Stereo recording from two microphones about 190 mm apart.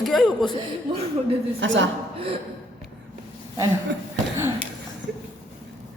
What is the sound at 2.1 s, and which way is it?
Speech, 30° right (ahead or behind).